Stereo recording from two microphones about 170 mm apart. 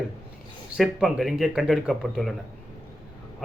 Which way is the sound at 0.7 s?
5° right (ahead or behind).